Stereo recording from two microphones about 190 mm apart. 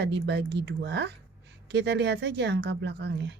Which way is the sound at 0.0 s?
65° right (ahead or behind).